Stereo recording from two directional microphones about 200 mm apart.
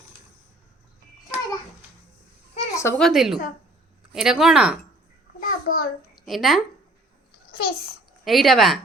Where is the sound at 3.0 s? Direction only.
Centre (ahead or behind).